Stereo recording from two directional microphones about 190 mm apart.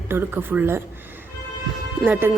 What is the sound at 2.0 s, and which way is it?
Speech, 10° right (ahead or behind).